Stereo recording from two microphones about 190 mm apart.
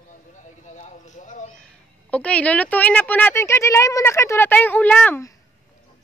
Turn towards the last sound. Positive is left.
turn(degrees=10)  # may be behind; listen again after turning